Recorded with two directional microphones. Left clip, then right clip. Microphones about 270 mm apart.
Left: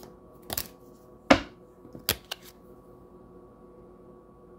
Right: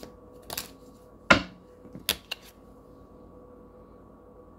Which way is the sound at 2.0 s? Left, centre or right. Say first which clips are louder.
Right 1 dB; left.